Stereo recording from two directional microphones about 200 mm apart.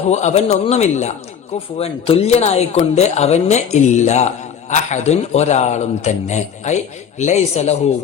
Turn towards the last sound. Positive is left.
turn(degrees=35)  # may be behind; listen again after turning